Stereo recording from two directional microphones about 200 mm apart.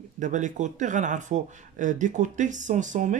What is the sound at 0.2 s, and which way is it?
Speech, 40° right (ahead or behind).